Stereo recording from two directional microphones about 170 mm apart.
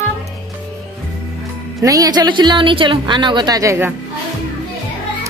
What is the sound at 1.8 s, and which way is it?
A woman's voice, 20° right (ahead or behind).